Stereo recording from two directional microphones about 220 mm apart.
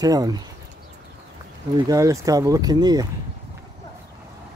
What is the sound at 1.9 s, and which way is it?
Speech, 15° right (ahead or behind).